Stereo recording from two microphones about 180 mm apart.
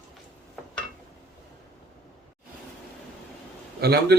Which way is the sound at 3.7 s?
65° right (ahead or behind).